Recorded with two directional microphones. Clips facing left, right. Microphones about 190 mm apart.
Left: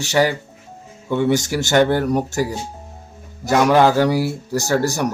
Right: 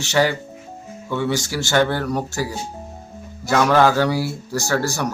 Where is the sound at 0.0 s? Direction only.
15° left (ahead or behind).